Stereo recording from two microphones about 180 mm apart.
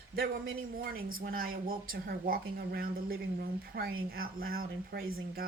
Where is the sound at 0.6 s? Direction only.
55° right (ahead or behind).